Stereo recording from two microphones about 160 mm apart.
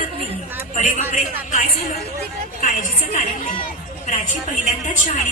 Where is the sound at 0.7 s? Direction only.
50° left (ahead or behind).